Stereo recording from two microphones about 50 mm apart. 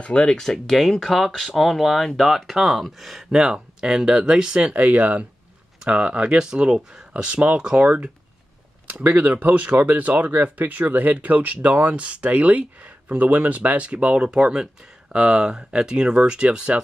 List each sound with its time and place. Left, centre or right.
0.0 s speech: left; by 3.3 s centre
3.3 s speech: centre
4.6 s speech: right
6.3 s speech: centre
9.0 s speech: right; by 16.8 s centre